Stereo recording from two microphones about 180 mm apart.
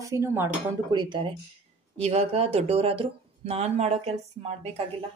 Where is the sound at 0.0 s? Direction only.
15° right (ahead or behind).